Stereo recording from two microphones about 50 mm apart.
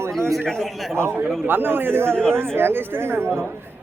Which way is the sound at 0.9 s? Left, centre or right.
Right.